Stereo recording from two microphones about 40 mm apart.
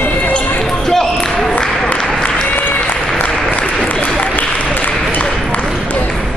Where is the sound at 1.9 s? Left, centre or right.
Left.